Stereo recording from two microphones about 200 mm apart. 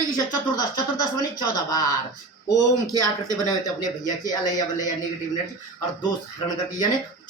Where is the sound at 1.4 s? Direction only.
20° left (ahead or behind).